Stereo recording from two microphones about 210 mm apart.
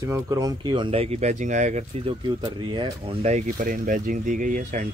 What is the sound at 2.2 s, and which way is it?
Speech, 20° right (ahead or behind).